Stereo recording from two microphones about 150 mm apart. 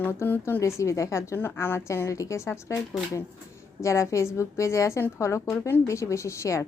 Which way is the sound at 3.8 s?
20° left (ahead or behind).